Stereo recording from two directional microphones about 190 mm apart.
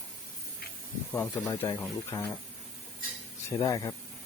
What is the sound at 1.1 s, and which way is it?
Speech, 10° left (ahead or behind).